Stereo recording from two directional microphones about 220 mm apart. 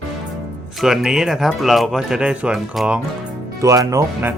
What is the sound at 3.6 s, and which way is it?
Speech, 15° right (ahead or behind).